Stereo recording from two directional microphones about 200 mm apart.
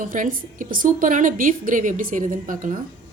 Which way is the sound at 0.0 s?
40° right (ahead or behind).